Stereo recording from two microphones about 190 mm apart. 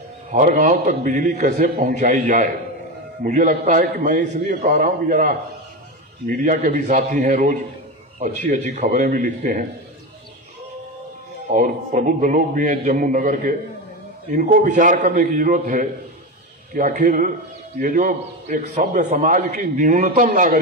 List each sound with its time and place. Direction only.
0.3 s a man's voice: 40° right (ahead or behind)
11.5 s a man's voice: 45° right (ahead or behind)